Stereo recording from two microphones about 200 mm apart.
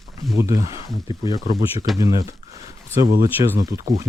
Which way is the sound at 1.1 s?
20° left (ahead or behind).